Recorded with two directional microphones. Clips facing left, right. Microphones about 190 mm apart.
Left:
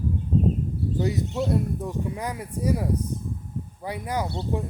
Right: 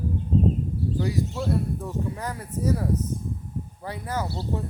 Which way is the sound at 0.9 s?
20° left (ahead or behind).